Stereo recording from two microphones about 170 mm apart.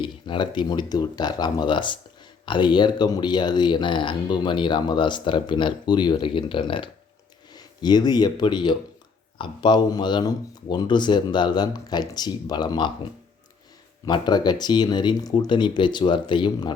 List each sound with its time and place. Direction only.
0.0 s speech: 30° left (ahead or behind)
14.0 s speech: 25° left (ahead or behind)